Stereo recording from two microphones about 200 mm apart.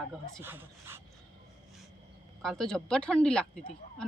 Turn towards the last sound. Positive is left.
turn(degrees=5)  # may be behind; listen again after turning